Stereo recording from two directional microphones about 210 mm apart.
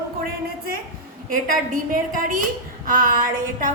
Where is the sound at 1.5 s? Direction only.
40° right (ahead or behind).